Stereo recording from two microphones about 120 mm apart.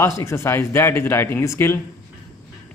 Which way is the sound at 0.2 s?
20° left (ahead or behind).